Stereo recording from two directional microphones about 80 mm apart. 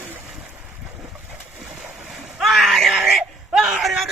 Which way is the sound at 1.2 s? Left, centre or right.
Right.